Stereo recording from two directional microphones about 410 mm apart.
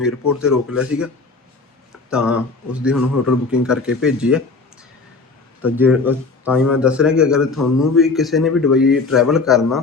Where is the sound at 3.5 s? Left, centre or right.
Centre.